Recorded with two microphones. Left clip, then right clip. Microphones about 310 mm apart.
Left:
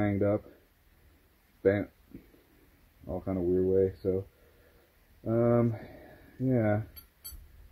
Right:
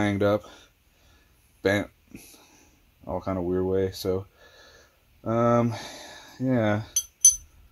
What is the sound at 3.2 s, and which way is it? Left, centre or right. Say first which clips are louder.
Speech: right 1 dB; right.